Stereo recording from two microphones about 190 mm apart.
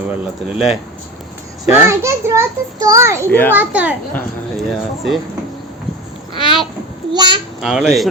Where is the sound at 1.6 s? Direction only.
15° right (ahead or behind).